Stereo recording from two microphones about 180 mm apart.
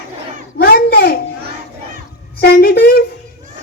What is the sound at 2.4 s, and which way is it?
Choir, 65° left (ahead or behind).